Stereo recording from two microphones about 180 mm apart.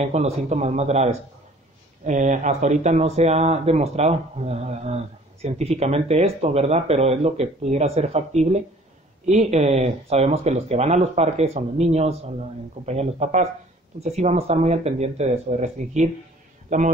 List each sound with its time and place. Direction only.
0.0 s speech: 40° right (ahead or behind)